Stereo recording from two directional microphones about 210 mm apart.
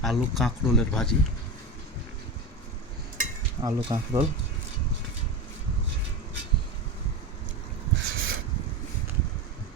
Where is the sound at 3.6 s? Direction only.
25° right (ahead or behind).